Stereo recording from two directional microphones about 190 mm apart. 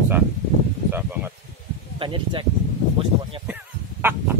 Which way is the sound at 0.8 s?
10° right (ahead or behind).